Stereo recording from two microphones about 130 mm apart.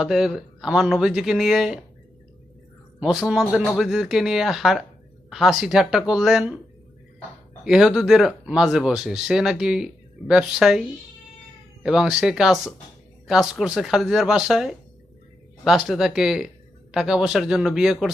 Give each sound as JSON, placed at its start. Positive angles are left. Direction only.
{"t": 0.0, "sound": "speech", "side_deg": 0}
{"t": 3.0, "sound": "speech", "side_deg": -5}
{"t": 7.6, "sound": "speech", "side_deg": -5}